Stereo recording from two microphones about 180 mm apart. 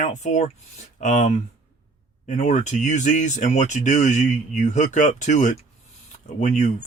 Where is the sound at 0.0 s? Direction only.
40° left (ahead or behind).